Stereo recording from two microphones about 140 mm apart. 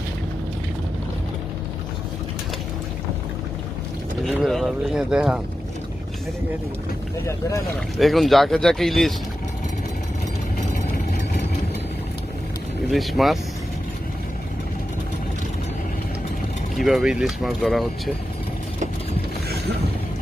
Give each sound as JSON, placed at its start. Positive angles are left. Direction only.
{"t": 4.2, "sound": "vehicle", "side_deg": 0}
{"t": 7.9, "sound": "speech", "side_deg": 0}
{"t": 12.9, "sound": "speech", "side_deg": 0}
{"t": 16.7, "sound": "speech", "side_deg": 0}